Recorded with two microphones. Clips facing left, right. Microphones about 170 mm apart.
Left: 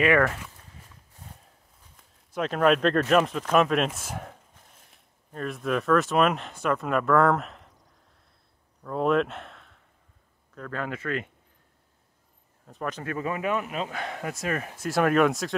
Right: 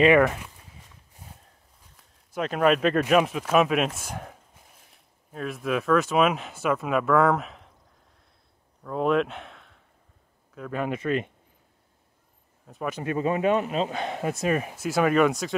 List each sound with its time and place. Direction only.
0.0 s speech: 20° right (ahead or behind)
2.0 s speech: centre (ahead or behind)
8.8 s speech: centre (ahead or behind)
10.5 s speech: 10° right (ahead or behind)
12.6 s speech: 5° right (ahead or behind)
13.0 s speech: 25° right (ahead or behind)
14.9 s speech: centre (ahead or behind)